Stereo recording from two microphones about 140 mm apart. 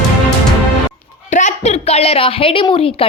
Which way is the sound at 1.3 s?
55° left (ahead or behind).